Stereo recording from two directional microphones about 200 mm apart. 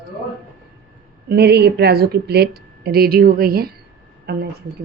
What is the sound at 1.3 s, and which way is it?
Speech, 55° right (ahead or behind).